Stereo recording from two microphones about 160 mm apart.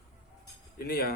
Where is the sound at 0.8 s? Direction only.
70° left (ahead or behind).